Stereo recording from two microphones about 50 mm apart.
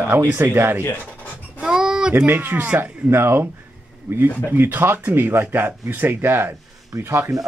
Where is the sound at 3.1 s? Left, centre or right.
Right.